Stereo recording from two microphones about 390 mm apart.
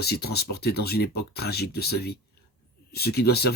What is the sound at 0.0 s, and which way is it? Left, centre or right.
Speech, left.